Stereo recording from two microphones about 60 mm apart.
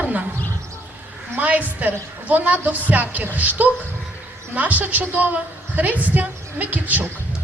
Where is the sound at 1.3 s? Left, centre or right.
Right.